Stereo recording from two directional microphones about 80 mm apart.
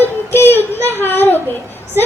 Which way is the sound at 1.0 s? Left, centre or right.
Left.